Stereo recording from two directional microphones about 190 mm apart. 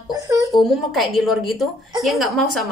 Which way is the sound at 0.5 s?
Centre (ahead or behind).